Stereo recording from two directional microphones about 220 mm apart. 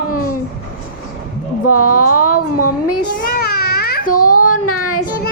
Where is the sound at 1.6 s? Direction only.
90° left.